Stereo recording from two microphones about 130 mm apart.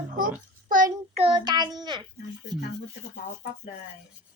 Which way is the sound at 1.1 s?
45° right (ahead or behind).